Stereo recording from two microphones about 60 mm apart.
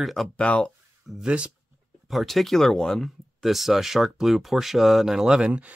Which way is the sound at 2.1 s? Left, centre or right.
Centre.